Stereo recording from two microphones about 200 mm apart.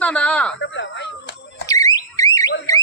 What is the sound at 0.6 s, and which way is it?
Speech, 65° left (ahead or behind).